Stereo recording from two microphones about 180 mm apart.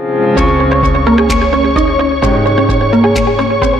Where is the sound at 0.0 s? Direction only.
Centre (ahead or behind).